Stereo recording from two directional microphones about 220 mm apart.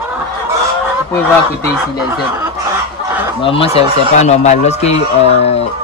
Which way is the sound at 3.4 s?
25° left (ahead or behind).